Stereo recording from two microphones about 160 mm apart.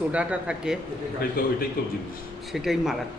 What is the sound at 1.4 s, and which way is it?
Speech, 65° left (ahead or behind).